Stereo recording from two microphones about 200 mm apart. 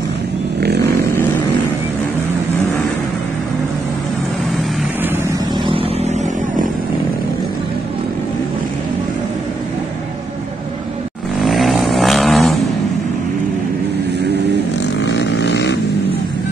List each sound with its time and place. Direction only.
0.6 s chainsaw: 55° right (ahead or behind)
5.7 s vehicle: 30° right (ahead or behind)
11.4 s vehicle: centre (ahead or behind)
15.0 s vehicle: 60° left (ahead or behind)